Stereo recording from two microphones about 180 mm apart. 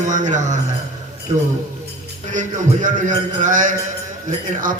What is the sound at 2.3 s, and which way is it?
A man's voice, 45° right (ahead or behind).